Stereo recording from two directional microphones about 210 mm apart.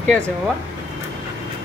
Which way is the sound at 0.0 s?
5° left (ahead or behind).